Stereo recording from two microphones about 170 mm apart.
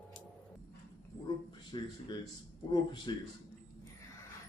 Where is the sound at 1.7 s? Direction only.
25° left (ahead or behind).